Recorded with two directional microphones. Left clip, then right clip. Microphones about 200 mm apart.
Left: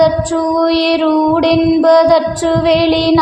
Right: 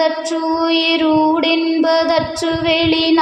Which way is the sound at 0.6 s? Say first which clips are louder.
Left 1 dB; 20° left (ahead or behind).